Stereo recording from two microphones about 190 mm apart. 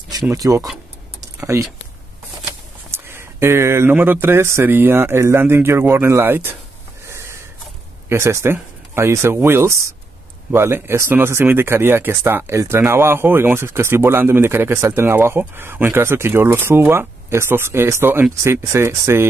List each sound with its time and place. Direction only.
0.1 s speech: 15° right (ahead or behind)
2.9 s speech: 15° right (ahead or behind)
7.1 s a sound: 15° right (ahead or behind)
8.1 s speech: 15° right (ahead or behind)